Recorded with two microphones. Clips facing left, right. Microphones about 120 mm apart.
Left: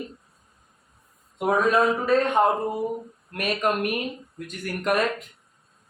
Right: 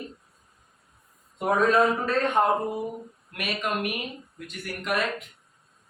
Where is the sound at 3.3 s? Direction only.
45° left (ahead or behind).